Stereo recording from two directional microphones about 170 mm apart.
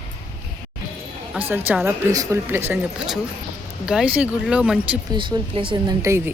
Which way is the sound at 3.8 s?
5° right (ahead or behind).